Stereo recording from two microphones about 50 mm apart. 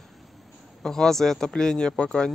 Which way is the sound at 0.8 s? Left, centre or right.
Centre.